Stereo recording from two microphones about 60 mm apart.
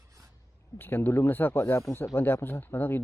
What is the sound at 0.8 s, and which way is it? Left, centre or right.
Speech, left.